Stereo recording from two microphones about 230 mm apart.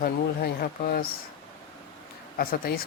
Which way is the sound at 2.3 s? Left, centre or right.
Left.